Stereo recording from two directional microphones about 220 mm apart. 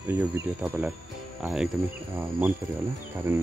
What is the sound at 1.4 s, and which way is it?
Speech, 5° right (ahead or behind).